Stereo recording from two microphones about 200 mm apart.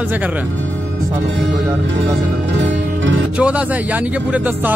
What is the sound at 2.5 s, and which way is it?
Music, 65° right (ahead or behind).